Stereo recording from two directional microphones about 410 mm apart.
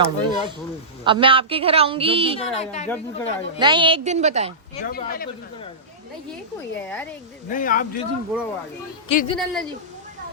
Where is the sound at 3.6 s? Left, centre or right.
Centre.